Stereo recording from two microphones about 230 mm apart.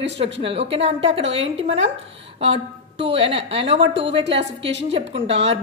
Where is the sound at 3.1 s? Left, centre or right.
Right.